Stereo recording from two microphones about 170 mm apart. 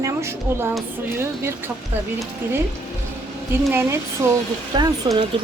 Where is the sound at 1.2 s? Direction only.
15° right (ahead or behind).